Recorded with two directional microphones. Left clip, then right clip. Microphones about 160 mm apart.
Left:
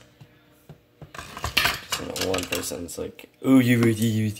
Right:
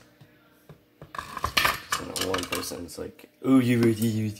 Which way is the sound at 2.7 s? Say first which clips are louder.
Left 4 dB; 25° left (ahead or behind).